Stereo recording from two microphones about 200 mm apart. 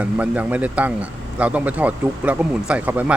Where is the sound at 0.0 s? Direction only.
5° right (ahead or behind).